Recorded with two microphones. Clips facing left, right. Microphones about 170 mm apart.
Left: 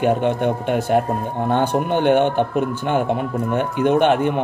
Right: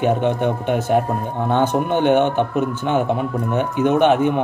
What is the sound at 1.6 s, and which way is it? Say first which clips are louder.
Speech: right 3 dB; 10° left (ahead or behind).